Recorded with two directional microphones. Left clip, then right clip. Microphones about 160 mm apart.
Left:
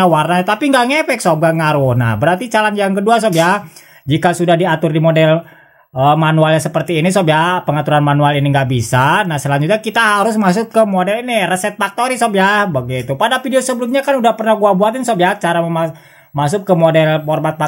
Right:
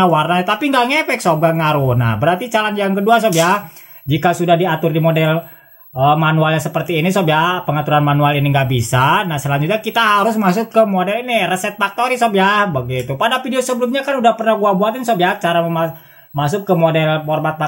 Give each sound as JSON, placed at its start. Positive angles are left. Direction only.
{"t": 0.0, "sound": "speech", "side_deg": 35}